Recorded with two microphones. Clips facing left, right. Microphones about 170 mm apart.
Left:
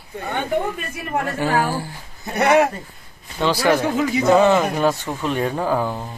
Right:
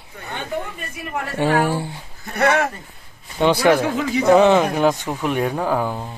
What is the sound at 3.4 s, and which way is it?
Speech, 20° right (ahead or behind).